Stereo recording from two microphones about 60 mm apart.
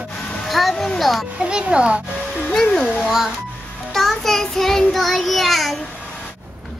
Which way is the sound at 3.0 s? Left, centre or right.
Centre.